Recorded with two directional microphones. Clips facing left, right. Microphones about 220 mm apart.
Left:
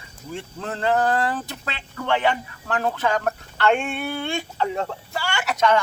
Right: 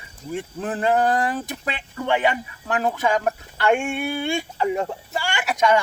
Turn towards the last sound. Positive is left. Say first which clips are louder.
# right 1 dB
turn(degrees=-10)  # may be behind; listen again after turning